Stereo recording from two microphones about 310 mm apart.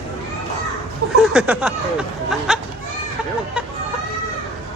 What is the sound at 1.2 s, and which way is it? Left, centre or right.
Speech, centre.